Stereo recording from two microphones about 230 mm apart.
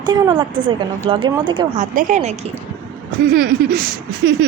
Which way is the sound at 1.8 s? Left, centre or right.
Right.